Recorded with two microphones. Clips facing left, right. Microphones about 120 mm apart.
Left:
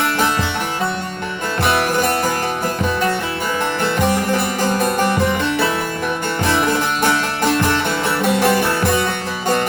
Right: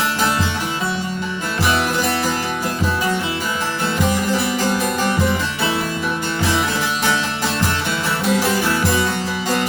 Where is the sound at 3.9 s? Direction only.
55° left (ahead or behind).